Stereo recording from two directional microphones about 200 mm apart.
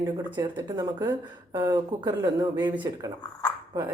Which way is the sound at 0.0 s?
20° right (ahead or behind).